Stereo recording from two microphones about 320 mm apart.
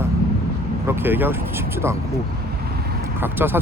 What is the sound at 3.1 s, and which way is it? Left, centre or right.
Speech, centre.